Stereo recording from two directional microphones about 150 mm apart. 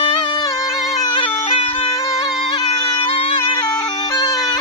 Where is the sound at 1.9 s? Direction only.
20° left (ahead or behind).